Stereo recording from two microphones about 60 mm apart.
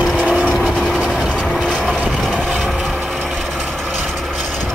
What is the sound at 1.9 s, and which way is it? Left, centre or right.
Vehicle, centre.